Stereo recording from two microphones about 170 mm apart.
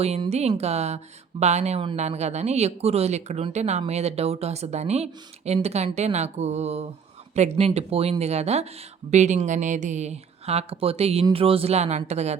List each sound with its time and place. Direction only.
0.0 s speech: 40° right (ahead or behind)